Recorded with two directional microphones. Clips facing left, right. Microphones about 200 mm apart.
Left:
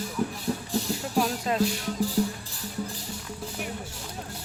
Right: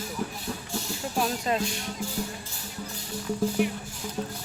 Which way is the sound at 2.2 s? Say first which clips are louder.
Left 8 dB; 35° left (ahead or behind).